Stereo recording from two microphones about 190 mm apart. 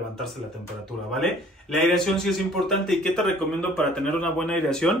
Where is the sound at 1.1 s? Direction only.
Centre (ahead or behind).